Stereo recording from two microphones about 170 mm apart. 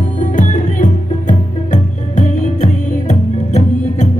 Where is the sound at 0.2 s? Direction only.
50° left (ahead or behind).